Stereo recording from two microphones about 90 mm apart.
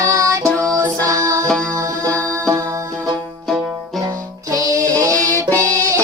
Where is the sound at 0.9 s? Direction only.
40° right (ahead or behind).